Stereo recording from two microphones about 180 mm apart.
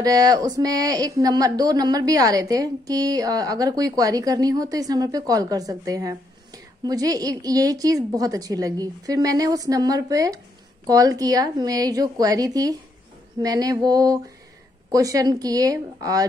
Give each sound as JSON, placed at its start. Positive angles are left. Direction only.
{"t": 0.0, "sound": "speech", "side_deg": -20}